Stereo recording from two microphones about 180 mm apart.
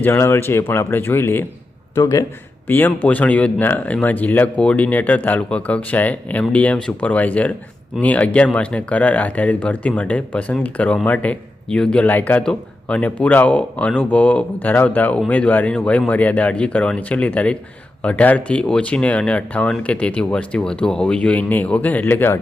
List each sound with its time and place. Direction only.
0.0 s speech: 15° left (ahead or behind)